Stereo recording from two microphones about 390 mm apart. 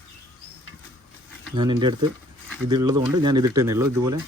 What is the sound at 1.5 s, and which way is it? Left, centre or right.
Speech, centre.